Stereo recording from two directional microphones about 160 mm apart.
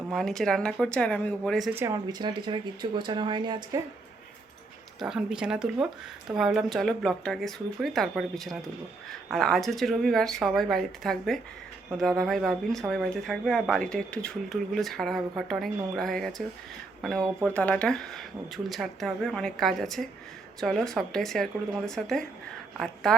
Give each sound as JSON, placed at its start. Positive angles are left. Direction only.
{"t": 0.1, "sound": "speech", "side_deg": 0}
{"t": 1.7, "sound": "speech", "side_deg": -20}
{"t": 4.9, "sound": "speech", "side_deg": -5}